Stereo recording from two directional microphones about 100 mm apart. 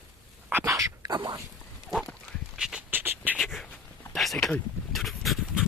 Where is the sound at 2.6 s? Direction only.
5° right (ahead or behind).